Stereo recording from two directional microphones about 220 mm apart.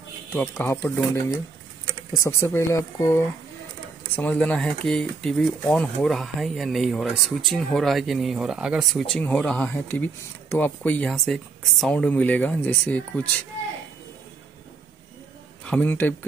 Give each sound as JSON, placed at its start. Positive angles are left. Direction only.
{"t": 0.3, "sound": "speech", "side_deg": 10}
{"t": 15.6, "sound": "a man's voice", "side_deg": 5}